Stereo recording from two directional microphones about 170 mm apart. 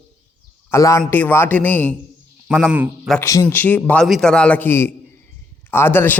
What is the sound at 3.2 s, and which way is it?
A man's voice, 15° left (ahead or behind).